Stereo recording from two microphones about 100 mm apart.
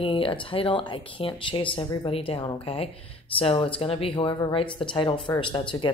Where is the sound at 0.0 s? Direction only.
60° left (ahead or behind).